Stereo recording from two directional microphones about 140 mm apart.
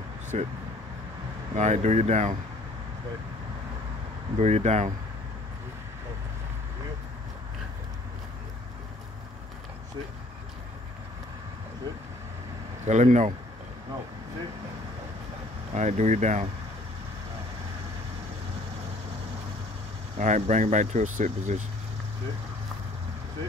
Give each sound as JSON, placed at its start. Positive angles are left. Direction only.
{"t": 0.3, "sound": "speech", "side_deg": -50}
{"t": 1.5, "sound": "speech", "side_deg": -55}
{"t": 4.4, "sound": "speech", "side_deg": -50}
{"t": 12.8, "sound": "speech", "side_deg": -55}
{"t": 15.7, "sound": "speech", "side_deg": -55}
{"t": 20.2, "sound": "speech", "side_deg": -60}